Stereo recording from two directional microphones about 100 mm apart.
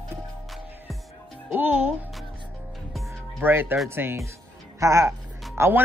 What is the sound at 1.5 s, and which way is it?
Speech, 15° right (ahead or behind).